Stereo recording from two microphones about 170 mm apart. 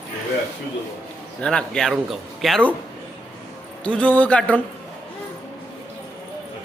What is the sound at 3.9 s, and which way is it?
Speech, 10° left (ahead or behind).